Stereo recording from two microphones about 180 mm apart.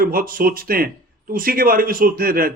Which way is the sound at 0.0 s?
55° right (ahead or behind).